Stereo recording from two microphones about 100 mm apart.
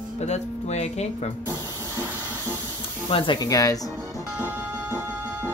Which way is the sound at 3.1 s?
55° left (ahead or behind).